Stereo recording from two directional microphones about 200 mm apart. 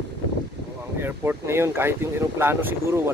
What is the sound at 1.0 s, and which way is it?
Speech, 10° right (ahead or behind).